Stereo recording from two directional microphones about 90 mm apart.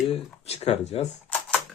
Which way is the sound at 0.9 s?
90° left.